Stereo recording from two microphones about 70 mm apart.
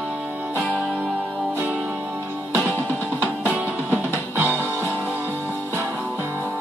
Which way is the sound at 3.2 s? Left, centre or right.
Right.